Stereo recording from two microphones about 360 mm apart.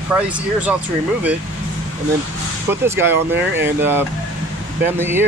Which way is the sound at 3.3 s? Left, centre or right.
Right.